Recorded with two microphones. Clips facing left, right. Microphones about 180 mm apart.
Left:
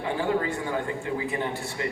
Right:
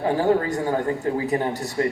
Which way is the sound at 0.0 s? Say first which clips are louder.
Right 6 dB; 40° right (ahead or behind).